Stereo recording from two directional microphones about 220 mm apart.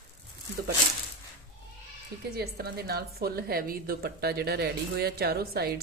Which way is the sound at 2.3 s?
45° right (ahead or behind).